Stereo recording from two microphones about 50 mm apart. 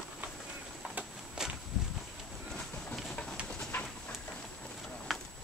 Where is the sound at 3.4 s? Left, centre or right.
Left.